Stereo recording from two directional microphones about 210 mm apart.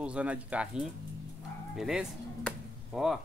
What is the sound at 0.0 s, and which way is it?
Speech, 5° right (ahead or behind).